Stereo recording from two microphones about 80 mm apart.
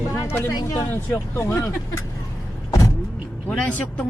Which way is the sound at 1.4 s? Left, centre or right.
Left.